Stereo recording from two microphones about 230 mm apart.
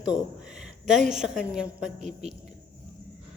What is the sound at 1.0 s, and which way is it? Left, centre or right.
Speech, centre.